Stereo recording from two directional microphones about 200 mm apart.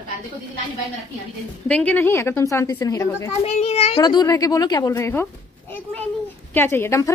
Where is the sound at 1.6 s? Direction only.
5° left (ahead or behind).